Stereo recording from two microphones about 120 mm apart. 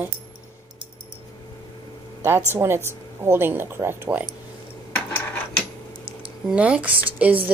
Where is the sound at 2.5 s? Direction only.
20° right (ahead or behind).